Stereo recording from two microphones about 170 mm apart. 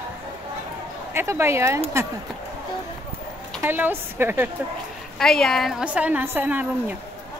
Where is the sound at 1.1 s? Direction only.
15° right (ahead or behind).